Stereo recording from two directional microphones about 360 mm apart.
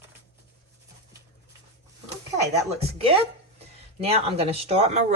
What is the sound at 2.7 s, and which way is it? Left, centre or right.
Speech, centre.